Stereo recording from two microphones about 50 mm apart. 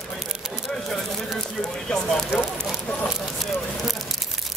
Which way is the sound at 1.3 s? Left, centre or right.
Centre.